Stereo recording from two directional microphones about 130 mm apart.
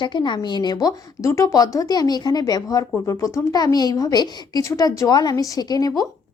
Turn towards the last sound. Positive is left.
turn(degrees=30)  # may be behind; listen again after turning